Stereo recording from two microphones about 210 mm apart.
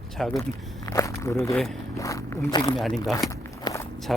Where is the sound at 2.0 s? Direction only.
15° left (ahead or behind).